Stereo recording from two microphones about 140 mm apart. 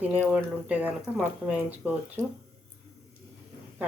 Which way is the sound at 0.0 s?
10° right (ahead or behind).